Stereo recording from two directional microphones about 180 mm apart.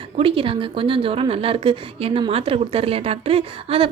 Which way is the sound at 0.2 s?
30° right (ahead or behind).